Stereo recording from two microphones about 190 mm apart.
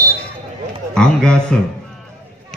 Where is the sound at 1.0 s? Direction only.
5° left (ahead or behind).